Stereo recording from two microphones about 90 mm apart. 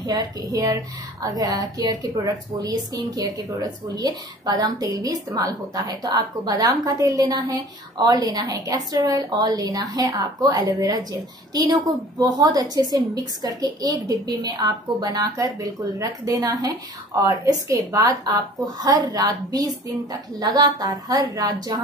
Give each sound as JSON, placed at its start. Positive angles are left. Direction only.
{"t": 0.0, "sound": "a woman's voice", "side_deg": -45}
{"t": 12.2, "sound": "a woman's voice", "side_deg": -45}